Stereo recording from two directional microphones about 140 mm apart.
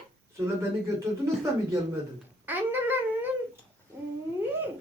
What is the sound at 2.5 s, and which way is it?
Dog, 15° right (ahead or behind).